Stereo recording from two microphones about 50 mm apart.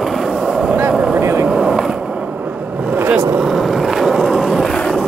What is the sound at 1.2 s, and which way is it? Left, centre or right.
Vehicle, right.